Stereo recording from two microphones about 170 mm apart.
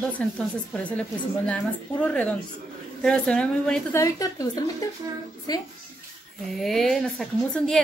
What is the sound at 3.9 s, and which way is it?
A woman's voice, 20° left (ahead or behind).